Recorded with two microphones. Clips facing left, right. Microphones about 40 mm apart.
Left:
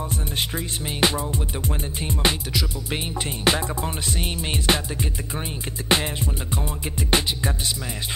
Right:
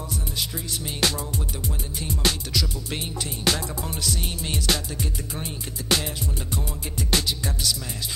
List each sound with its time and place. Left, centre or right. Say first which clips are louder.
0.1 s music: left 4 dB; left
0.8 s music: left 4 dB; left